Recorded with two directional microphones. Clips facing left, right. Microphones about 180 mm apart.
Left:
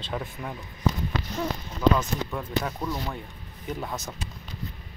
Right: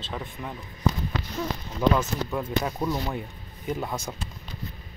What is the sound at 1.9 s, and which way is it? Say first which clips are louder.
Speech: right 2 dB; 10° right (ahead or behind).